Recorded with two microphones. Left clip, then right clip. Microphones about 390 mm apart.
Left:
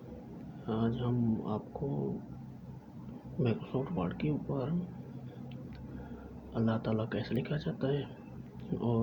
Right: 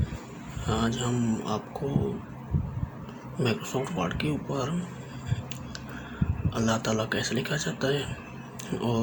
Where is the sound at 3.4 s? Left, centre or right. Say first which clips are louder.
Right 6 dB; left.